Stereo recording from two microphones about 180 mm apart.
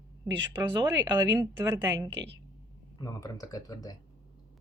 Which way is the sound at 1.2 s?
15° right (ahead or behind).